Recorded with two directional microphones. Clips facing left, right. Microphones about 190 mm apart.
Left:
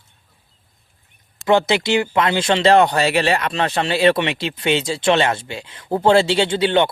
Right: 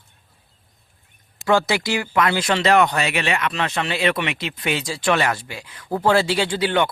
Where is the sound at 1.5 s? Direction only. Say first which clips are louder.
Left 3 dB; 20° left (ahead or behind).